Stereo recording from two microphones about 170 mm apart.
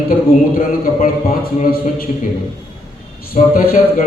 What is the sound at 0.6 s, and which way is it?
Speech, 55° left (ahead or behind).